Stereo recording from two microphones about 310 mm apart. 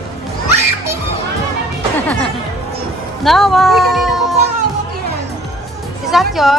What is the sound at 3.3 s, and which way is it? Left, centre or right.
Speech, centre.